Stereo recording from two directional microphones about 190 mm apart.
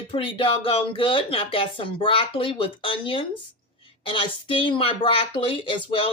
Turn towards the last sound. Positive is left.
turn(degrees=25)  # may be behind; listen again after turning